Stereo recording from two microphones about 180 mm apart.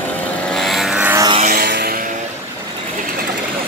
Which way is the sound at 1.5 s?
55° right (ahead or behind).